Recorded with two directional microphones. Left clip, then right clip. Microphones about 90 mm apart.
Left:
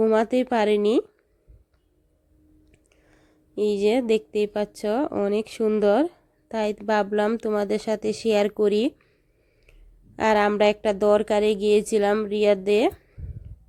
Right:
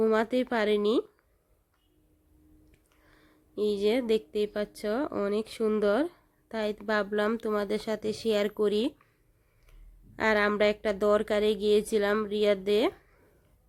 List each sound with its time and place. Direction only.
0.0 s speech: 35° left (ahead or behind)
2.7 s speech: 30° left (ahead or behind)
5.8 s a sound: 30° left (ahead or behind)
6.7 s speech: 35° left (ahead or behind)
10.2 s speech: 35° left (ahead or behind)